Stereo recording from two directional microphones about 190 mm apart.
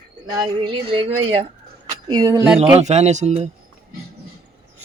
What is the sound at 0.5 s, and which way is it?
Speech, 25° right (ahead or behind).